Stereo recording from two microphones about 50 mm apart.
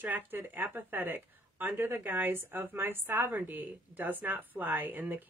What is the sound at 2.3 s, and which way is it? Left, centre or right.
A woman's voice, right.